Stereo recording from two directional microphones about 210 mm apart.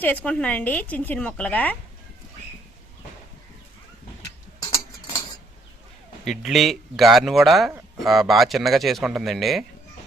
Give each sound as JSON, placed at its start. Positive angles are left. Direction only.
{"t": 0.0, "sound": "a woman's voice", "side_deg": 5}
{"t": 4.6, "sound": "a sound", "side_deg": 20}
{"t": 6.2, "sound": "a man's voice", "side_deg": 0}